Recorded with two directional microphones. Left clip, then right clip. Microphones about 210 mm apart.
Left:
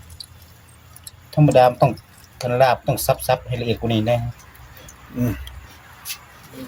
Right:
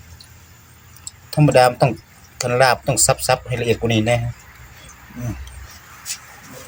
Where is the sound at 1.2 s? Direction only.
Centre (ahead or behind).